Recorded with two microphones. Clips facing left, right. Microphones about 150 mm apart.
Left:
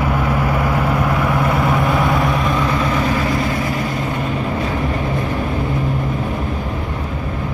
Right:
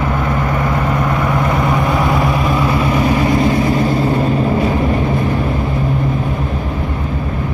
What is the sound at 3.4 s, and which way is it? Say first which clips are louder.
Vehicle: right 6 dB; 30° right (ahead or behind).